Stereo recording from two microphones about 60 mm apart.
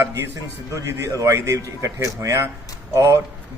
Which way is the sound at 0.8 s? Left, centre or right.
Right.